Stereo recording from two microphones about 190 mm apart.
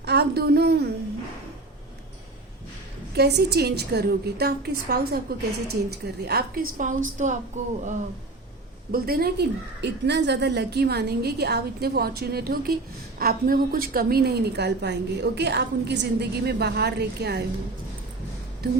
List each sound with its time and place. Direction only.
0.0 s a sound: 60° right (ahead or behind)
3.2 s a woman's voice: 60° right (ahead or behind)
6.7 s a woman's voice: 40° right (ahead or behind)
8.9 s a woman's voice: 55° right (ahead or behind)